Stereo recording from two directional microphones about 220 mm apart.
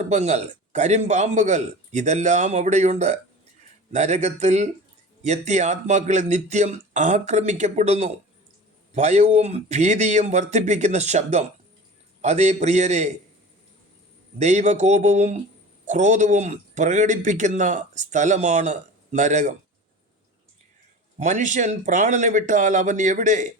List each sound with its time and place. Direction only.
0.0 s a man's voice: 30° right (ahead or behind)
14.3 s a man's voice: 30° right (ahead or behind)
21.2 s a man's voice: 35° right (ahead or behind)